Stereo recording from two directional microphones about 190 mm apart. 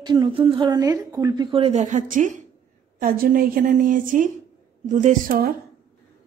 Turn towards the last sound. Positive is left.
turn(degrees=-50)  # may be behind; listen again after turning